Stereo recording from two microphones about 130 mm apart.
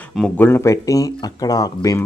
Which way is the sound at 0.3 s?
15° left (ahead or behind).